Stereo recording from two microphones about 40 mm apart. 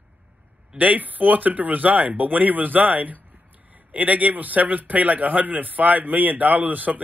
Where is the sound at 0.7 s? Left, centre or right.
Right.